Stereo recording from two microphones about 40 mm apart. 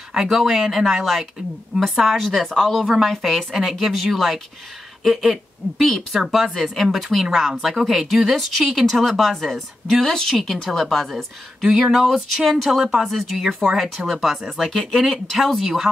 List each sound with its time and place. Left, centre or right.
0.1 s a woman's voice: centre
2.8 s a woman's voice: centre
11.6 s speech: centre
11.9 s speech: centre